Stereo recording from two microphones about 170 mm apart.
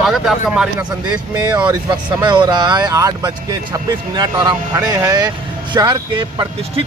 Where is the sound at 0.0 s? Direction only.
Centre (ahead or behind).